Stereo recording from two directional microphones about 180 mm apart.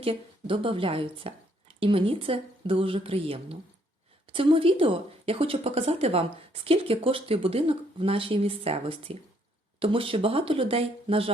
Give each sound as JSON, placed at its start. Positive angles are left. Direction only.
{"t": 0.0, "sound": "a woman's voice", "side_deg": -30}